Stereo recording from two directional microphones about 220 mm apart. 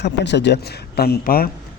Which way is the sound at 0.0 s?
50° left (ahead or behind).